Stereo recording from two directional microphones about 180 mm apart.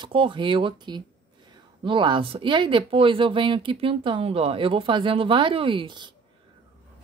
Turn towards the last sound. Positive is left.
turn(degrees=-25)  # may be behind; listen again after turning